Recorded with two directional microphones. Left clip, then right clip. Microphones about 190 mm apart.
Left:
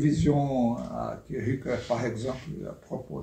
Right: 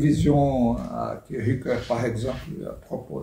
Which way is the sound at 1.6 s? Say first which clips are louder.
Right 4 dB; 10° right (ahead or behind).